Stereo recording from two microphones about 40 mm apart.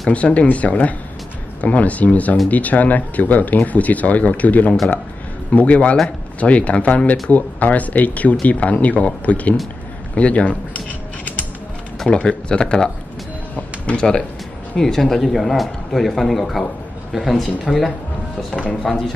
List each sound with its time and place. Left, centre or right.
0.1 s speech: left
12.1 s speech: left
13.6 s speech: left
14.8 s a man's voice: centre
18.5 s speech: left
18.8 s speech: centre